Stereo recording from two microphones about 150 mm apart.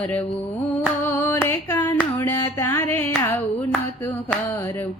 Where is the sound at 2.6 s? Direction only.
15° left (ahead or behind).